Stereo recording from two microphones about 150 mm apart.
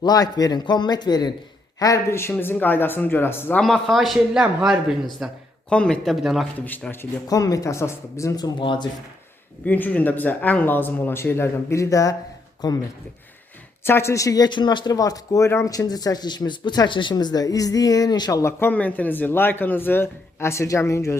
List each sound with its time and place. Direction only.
0.0 s speech: 25° left (ahead or behind)
3.6 s a man's voice: centre (ahead or behind)
6.7 s speech: 10° left (ahead or behind); by 8.9 s 30° left (ahead or behind)
9.6 s speech: 10° left (ahead or behind)
13.8 s speech: 15° left (ahead or behind)